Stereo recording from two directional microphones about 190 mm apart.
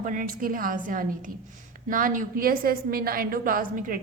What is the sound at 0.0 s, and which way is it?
A woman's voice, 45° right (ahead or behind).